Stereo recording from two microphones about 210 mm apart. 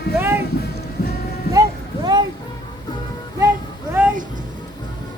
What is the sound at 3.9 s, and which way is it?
Music, 10° right (ahead or behind).